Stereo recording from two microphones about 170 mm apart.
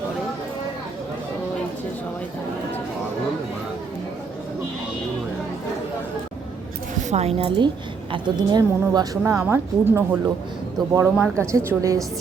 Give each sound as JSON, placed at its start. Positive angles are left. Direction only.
{"t": 7.1, "sound": "a woman's voice", "side_deg": -35}